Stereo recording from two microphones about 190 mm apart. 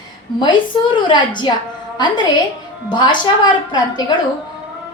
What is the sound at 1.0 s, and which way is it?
Speech, 25° left (ahead or behind).